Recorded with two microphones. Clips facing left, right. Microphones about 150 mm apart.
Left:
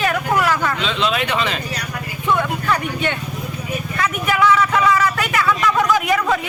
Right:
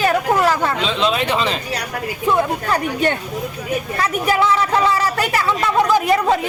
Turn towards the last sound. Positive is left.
turn(degrees=-30)  # may be behind; listen again after turning